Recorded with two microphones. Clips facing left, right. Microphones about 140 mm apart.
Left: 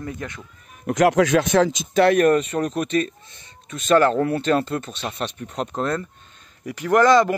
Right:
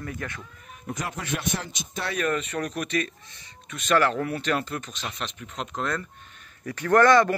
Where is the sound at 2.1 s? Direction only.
45° left (ahead or behind).